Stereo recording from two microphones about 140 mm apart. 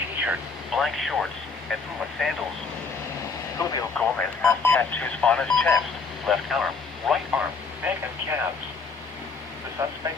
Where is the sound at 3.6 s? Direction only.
25° left (ahead or behind).